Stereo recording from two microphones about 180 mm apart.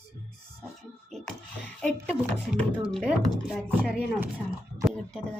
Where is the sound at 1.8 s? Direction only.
5° left (ahead or behind).